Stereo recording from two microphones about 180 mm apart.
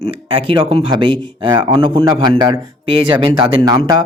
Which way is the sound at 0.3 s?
30° right (ahead or behind).